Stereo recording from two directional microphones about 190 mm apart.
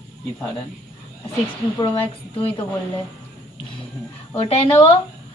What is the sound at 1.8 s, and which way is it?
Speech, 25° left (ahead or behind).